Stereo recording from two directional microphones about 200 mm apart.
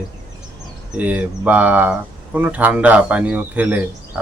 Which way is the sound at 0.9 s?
5° right (ahead or behind).